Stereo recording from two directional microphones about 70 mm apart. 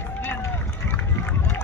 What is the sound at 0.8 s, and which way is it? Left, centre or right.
Run, left.